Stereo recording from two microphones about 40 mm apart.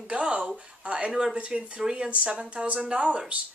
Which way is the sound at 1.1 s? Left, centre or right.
Centre.